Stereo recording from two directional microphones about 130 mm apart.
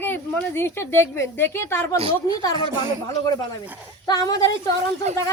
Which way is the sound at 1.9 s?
45° right (ahead or behind).